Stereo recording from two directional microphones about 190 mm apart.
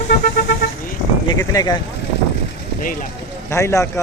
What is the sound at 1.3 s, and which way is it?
Speech, 20° left (ahead or behind).